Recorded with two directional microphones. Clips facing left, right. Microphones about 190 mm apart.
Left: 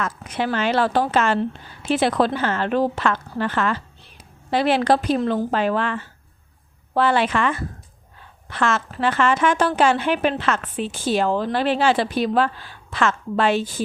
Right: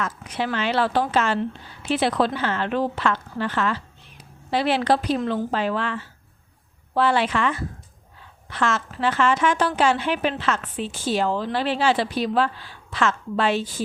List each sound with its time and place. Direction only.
0.0 s a woman's voice: 50° left (ahead or behind)
5.5 s a woman's voice: 55° left (ahead or behind)